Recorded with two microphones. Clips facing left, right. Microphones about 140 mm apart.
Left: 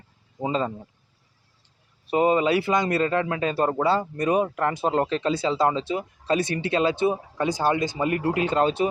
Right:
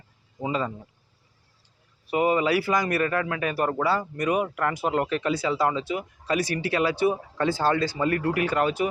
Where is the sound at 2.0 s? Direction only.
25° left (ahead or behind).